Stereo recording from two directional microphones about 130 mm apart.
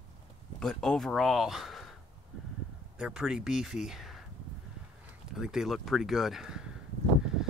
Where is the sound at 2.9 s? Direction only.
5° right (ahead or behind).